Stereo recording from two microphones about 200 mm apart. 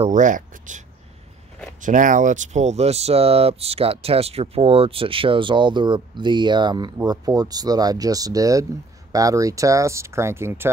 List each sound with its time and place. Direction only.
0.0 s speech: 40° right (ahead or behind); by 10.7 s 10° right (ahead or behind)